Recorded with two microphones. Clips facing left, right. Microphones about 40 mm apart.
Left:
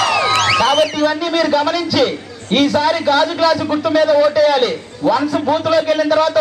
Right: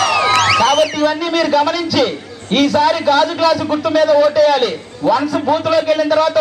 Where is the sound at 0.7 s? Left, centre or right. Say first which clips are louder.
Right 1 dB; left.